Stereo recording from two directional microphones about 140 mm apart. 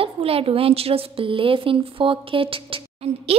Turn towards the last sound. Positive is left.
turn(degrees=-45)  # may be behind; listen again after turning